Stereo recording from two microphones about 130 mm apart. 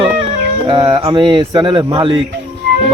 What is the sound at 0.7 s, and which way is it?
Speech, 35° right (ahead or behind).